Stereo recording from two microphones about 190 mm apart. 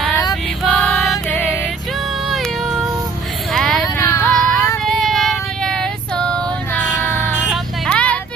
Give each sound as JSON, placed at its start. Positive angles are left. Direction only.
{"t": 0.3, "sound": "music", "side_deg": 0}
{"t": 2.3, "sound": "cat", "side_deg": 0}
{"t": 3.5, "sound": "vehicle", "side_deg": 0}
{"t": 3.8, "sound": "music", "side_deg": 20}
{"t": 5.0, "sound": "female singing", "side_deg": 0}
{"t": 7.4, "sound": "a sound", "side_deg": 5}